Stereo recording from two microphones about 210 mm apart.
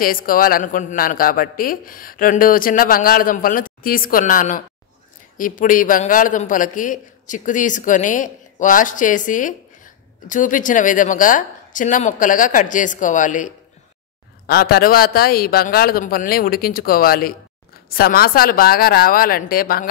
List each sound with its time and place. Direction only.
0.0 s a man's voice: 40° left (ahead or behind)